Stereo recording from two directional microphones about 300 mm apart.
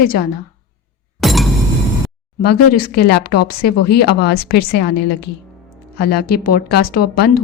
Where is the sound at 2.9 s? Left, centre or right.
Left.